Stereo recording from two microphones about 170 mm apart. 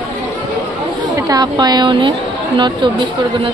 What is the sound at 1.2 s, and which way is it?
Speech, 25° right (ahead or behind).